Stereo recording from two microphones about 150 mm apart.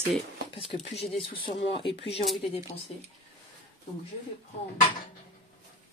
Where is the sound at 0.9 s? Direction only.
40° left (ahead or behind).